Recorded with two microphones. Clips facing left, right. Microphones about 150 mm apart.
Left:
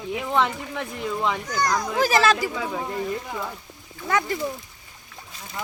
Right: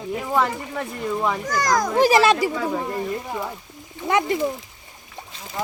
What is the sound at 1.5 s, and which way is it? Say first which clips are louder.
Speech: right 3 dB; 90° right.